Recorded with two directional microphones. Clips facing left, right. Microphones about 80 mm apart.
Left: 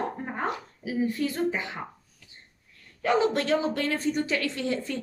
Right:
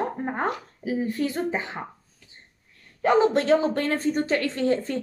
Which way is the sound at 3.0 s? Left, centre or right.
Right.